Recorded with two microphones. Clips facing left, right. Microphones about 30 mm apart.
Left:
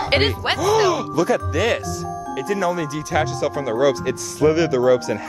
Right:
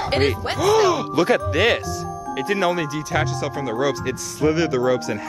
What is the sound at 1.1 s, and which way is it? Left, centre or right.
Speech, right.